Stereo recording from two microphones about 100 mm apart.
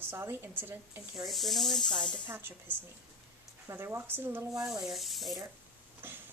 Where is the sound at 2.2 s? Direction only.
20° right (ahead or behind).